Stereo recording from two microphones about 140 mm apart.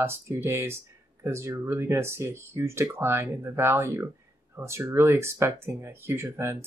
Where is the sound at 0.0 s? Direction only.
15° right (ahead or behind).